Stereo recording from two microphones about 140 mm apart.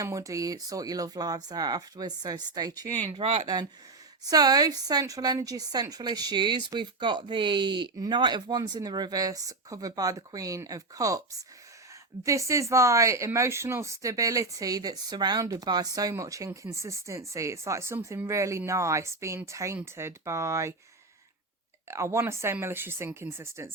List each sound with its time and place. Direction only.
0.0 s speech: 25° right (ahead or behind)
3.1 s speech: 50° right (ahead or behind)
3.4 s speech: 30° right (ahead or behind)
21.8 s speech: 20° right (ahead or behind)